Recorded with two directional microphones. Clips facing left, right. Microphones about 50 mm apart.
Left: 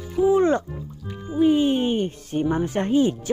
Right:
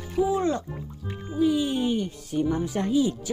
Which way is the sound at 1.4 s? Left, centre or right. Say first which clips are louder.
Left 5 dB; left.